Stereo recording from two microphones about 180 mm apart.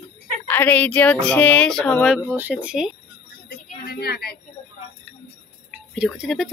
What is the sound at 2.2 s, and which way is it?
Speech, 10° right (ahead or behind).